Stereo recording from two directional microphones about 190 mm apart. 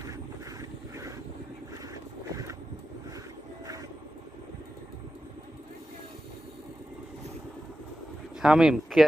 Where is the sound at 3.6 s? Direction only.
20° right (ahead or behind).